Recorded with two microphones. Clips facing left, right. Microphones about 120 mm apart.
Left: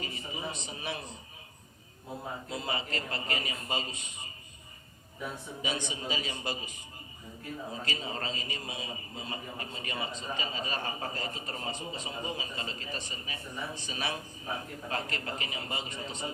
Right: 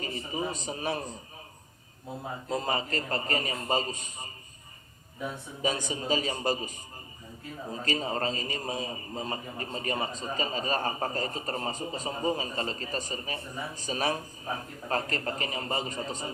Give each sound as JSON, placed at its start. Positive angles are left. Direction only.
{"t": 0.0, "sound": "a man's voice", "side_deg": -40}
{"t": 2.5, "sound": "a man's voice", "side_deg": -40}
{"t": 5.6, "sound": "a man's voice", "side_deg": -40}